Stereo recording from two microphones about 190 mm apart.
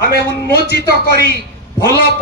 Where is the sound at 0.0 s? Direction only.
55° left (ahead or behind).